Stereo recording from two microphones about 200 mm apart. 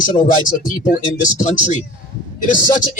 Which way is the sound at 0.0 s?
40° left (ahead or behind).